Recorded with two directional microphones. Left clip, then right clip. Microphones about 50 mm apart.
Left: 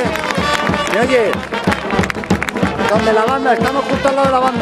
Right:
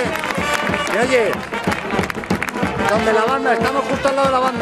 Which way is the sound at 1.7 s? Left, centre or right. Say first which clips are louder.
Left 4 dB; left.